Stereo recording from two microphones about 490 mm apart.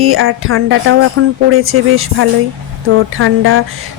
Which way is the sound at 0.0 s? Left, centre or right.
Right.